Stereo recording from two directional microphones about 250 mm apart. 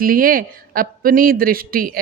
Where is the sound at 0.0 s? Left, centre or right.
Right.